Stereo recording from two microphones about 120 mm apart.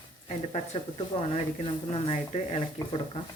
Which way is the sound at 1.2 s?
55° left (ahead or behind).